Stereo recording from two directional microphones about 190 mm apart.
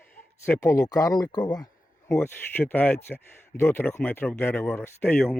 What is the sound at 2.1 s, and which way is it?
Speech, 10° left (ahead or behind).